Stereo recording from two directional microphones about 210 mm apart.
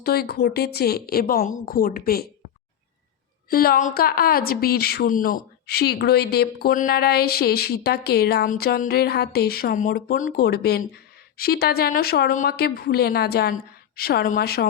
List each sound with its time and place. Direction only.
0.0 s a woman's voice: 50° left (ahead or behind)
3.5 s a woman's voice: 45° left (ahead or behind)